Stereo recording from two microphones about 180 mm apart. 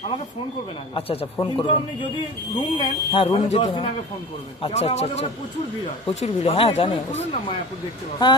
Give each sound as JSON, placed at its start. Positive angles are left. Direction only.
{"t": 0.9, "sound": "speech", "side_deg": 30}